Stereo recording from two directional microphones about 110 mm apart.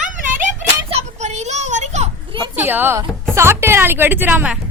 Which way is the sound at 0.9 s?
90° right.